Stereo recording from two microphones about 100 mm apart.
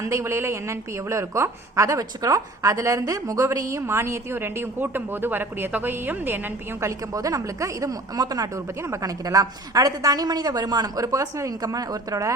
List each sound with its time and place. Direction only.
0.0 s a woman's voice: 30° right (ahead or behind)
7.1 s speech: 35° right (ahead or behind)